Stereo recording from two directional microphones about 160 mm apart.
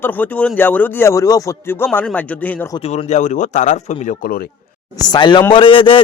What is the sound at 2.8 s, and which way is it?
Speech, 45° left (ahead or behind).